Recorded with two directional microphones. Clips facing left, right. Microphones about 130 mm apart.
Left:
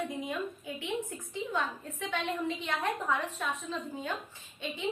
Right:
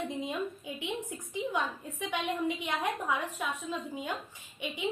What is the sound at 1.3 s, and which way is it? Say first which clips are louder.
A woman's voice: right 2 dB; 15° right (ahead or behind).